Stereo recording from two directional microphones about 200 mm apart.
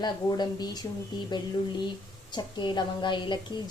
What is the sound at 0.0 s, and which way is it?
A woman's voice, 20° left (ahead or behind).